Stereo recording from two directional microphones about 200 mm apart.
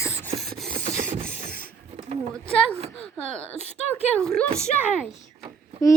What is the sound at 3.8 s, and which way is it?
Speech, 35° left (ahead or behind).